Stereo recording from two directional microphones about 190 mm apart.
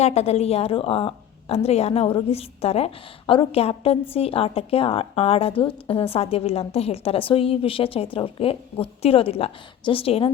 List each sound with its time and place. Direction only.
0.0 s a woman's voice: 35° left (ahead or behind)